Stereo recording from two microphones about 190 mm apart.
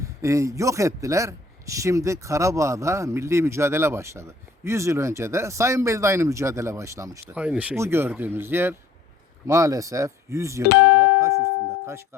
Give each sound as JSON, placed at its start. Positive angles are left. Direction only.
{"t": 0.0, "sound": "speech", "side_deg": -15}
{"t": 10.7, "sound": "speech", "side_deg": 55}
{"t": 11.0, "sound": "music", "side_deg": -15}